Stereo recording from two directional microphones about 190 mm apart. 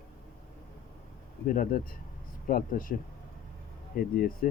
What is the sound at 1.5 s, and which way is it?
Speech, 45° left (ahead or behind).